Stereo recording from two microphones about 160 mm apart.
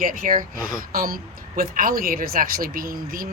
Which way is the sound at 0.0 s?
60° right (ahead or behind).